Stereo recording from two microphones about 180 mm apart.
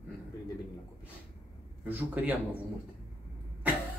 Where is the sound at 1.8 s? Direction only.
10° right (ahead or behind).